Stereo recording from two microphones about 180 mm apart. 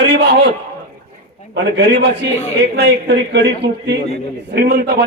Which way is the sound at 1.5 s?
80° right.